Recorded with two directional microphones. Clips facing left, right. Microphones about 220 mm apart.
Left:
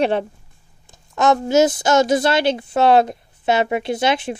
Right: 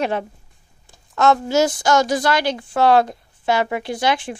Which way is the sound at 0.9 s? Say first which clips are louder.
Even; 20° left (ahead or behind).